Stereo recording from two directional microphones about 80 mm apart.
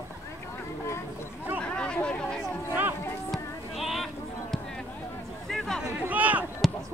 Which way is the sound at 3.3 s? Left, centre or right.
Centre.